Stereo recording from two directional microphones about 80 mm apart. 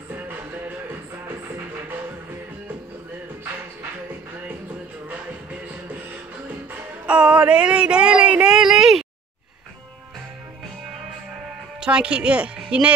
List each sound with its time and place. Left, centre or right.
0.1 s music: right
7.1 s a sound: centre
11.8 s speech: centre